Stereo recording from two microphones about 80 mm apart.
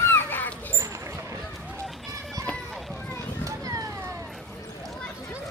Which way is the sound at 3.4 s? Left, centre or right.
Right.